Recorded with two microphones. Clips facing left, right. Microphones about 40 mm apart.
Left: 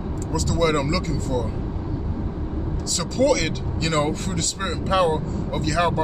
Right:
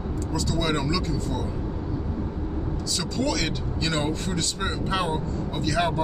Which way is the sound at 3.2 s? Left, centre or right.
Left.